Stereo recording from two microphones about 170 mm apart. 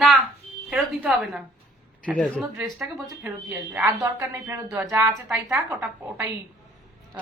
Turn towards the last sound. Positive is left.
turn(degrees=-10)  # may be behind; listen again after turning